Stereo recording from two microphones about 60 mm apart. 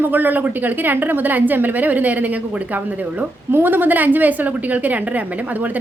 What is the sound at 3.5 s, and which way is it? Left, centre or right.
A woman's voice, right.